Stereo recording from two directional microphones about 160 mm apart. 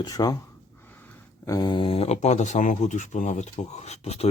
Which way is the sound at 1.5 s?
25° left (ahead or behind).